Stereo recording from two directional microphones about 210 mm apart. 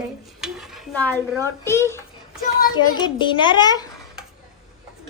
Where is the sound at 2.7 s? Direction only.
20° left (ahead or behind).